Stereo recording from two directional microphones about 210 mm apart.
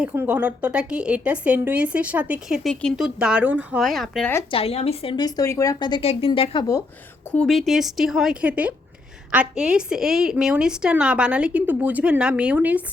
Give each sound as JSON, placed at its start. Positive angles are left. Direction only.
{"t": 0.0, "sound": "a woman's voice", "side_deg": -5}
{"t": 4.5, "sound": "a woman's voice", "side_deg": 30}
{"t": 7.3, "sound": "a woman's voice", "side_deg": 5}